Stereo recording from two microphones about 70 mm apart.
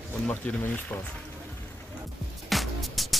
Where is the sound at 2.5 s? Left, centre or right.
Centre.